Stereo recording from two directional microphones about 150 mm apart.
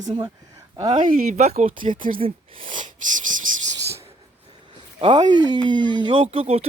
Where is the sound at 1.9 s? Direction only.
65° right (ahead or behind).